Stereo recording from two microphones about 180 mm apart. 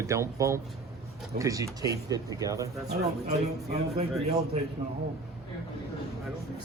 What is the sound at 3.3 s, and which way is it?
Speech, 35° right (ahead or behind).